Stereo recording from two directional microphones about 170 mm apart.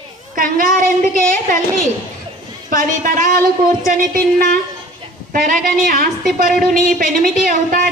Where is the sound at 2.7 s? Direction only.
55° right (ahead or behind).